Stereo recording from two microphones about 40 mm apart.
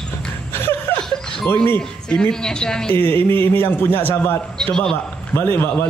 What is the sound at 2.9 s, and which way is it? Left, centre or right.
A man's voice, left.